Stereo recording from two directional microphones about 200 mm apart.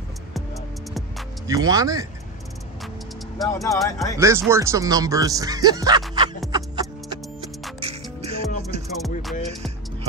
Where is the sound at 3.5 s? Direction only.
15° left (ahead or behind).